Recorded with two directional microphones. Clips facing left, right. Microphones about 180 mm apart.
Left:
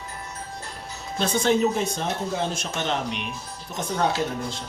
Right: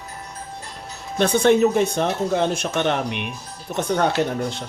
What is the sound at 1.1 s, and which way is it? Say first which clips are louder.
Speech: right 6 dB; 65° right (ahead or behind).